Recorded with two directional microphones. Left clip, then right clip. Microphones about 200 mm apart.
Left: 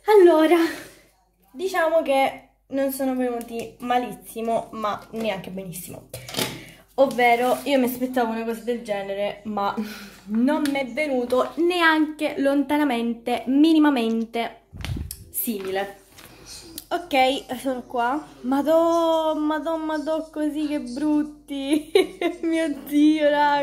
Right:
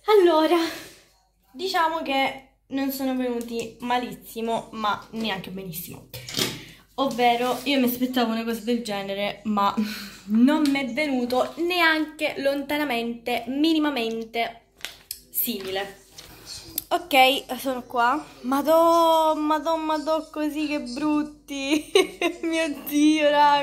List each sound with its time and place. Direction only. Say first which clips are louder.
0.0 s a sound: left 3 dB; 20° left (ahead or behind)
1.6 s a woman's voice: left 3 dB; 10° left (ahead or behind)
7.0 s a woman's voice: left 3 dB; 25° left (ahead or behind)
16.7 s a woman's voice: right 2 dB; 5° left (ahead or behind)